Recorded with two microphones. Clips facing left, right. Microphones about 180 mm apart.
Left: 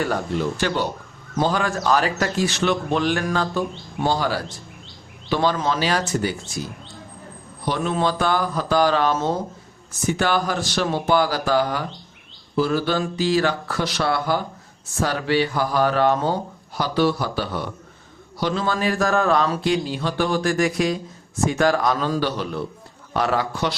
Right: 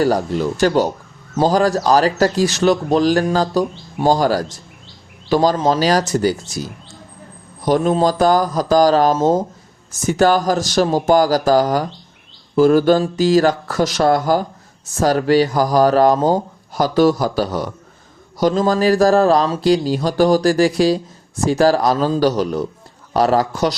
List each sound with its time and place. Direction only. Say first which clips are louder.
0.0 s speech: right 6 dB; 40° right (ahead or behind)